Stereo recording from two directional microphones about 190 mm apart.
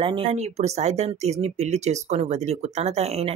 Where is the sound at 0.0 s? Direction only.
30° right (ahead or behind).